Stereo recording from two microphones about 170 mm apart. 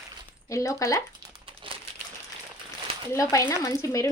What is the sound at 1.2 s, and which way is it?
Crumpling, 30° right (ahead or behind).